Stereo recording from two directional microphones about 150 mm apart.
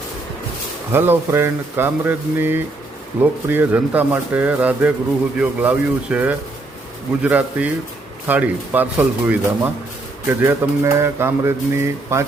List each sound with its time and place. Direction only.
0.9 s speech: 15° right (ahead or behind)